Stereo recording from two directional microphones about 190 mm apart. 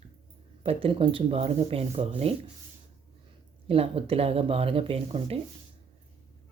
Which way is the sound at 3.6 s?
30° right (ahead or behind).